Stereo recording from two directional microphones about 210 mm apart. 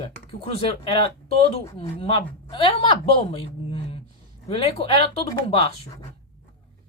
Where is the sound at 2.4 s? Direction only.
25° left (ahead or behind).